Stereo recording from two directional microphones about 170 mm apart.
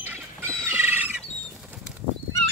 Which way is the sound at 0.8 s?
10° right (ahead or behind).